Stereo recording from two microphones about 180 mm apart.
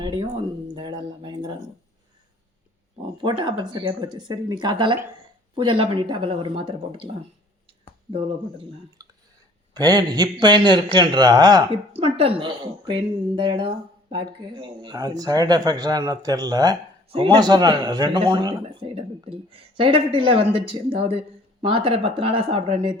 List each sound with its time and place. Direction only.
0.0 s a sound: 25° right (ahead or behind)
3.2 s speech: 25° right (ahead or behind)
8.1 s speech: 30° right (ahead or behind)
11.9 s speech: 35° right (ahead or behind)